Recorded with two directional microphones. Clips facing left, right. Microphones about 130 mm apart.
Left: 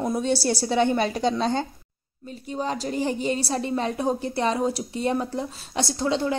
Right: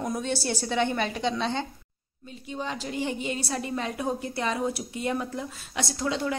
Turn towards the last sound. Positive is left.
turn(degrees=30)  # may be behind; listen again after turning